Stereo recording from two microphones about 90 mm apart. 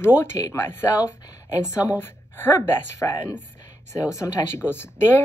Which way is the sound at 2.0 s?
25° left (ahead or behind).